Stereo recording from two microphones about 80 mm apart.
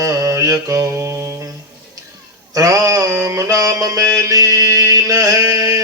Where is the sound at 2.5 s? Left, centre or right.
Right.